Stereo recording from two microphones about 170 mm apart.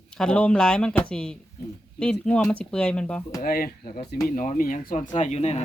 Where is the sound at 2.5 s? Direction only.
5° left (ahead or behind).